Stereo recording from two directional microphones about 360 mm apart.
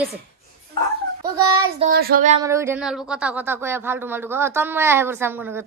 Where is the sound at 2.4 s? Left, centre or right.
Centre.